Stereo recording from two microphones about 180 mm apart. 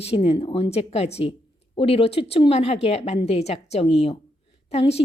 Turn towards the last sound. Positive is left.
turn(degrees=35)  # may be behind; listen again after turning